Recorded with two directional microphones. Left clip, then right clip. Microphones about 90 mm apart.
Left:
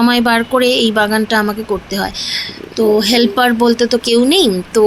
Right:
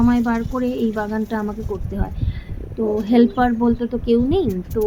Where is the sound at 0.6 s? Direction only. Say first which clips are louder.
Left 11 dB; 35° left (ahead or behind).